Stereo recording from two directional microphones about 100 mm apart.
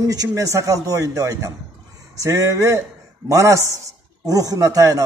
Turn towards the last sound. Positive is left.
turn(degrees=-35)  # may be behind; listen again after turning